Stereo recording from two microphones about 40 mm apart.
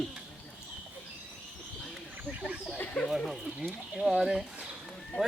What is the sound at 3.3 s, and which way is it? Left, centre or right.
Speech, centre.